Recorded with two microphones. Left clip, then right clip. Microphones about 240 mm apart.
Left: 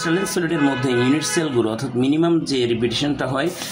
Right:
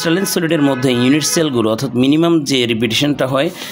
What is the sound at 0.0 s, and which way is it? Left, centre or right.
Speech, right.